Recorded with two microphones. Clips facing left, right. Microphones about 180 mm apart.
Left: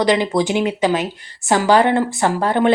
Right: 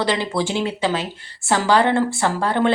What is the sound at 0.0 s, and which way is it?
A woman's voice, 15° left (ahead or behind).